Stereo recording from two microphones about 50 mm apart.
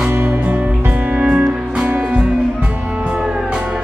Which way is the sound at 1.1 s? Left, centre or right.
Right.